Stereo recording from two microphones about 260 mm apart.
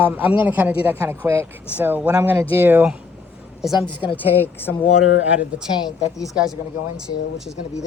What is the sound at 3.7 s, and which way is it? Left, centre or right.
Speech, centre.